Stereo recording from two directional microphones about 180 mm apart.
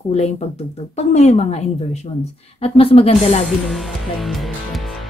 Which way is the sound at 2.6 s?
35° left (ahead or behind).